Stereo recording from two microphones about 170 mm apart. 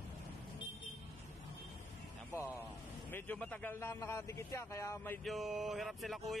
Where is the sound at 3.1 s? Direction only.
10° left (ahead or behind).